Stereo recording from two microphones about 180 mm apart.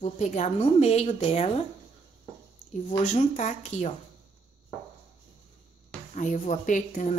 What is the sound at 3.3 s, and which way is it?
Speech, 40° left (ahead or behind).